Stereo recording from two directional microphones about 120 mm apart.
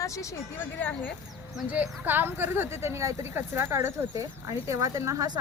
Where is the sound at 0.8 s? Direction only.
15° left (ahead or behind).